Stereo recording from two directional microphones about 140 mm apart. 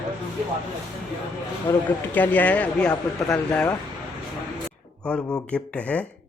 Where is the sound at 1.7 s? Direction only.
10° left (ahead or behind).